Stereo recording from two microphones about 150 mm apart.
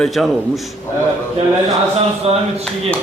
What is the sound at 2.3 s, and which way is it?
Speech, 45° right (ahead or behind).